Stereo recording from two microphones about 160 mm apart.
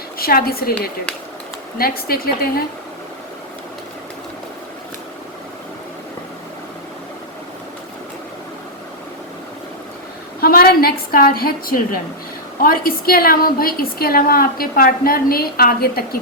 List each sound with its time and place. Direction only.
0.2 s a woman's voice: 70° left (ahead or behind)
1.8 s a woman's voice: 70° left (ahead or behind)
10.4 s a woman's voice: 70° left (ahead or behind)